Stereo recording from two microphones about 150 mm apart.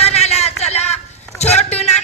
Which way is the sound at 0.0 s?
45° left (ahead or behind).